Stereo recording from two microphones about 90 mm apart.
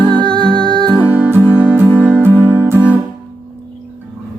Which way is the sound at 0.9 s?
20° right (ahead or behind).